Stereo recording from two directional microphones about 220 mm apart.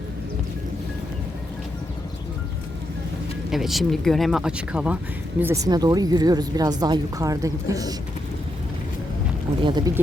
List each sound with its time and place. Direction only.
3.5 s speech: centre (ahead or behind)
9.6 s speech: 20° right (ahead or behind)